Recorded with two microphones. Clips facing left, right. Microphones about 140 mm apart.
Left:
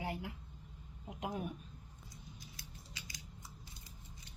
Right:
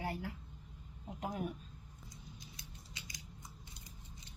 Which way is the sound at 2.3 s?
20° right (ahead or behind).